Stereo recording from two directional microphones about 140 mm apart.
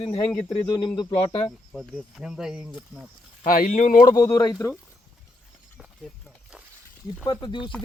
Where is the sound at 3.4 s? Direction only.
75° left (ahead or behind).